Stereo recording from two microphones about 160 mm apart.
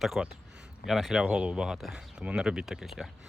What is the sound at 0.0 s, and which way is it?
Speech, centre (ahead or behind).